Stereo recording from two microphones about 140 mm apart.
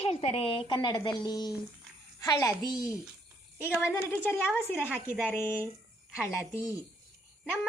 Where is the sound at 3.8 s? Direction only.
15° left (ahead or behind).